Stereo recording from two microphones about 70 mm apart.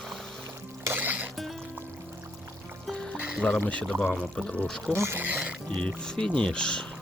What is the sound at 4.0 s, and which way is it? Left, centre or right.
Speech, centre.